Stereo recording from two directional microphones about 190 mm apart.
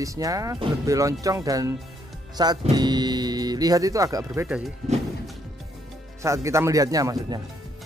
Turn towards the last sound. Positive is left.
turn(degrees=-20)  # may be behind; listen again after turning